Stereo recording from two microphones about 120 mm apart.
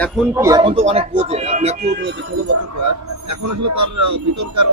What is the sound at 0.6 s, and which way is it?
Speech, 50° right (ahead or behind).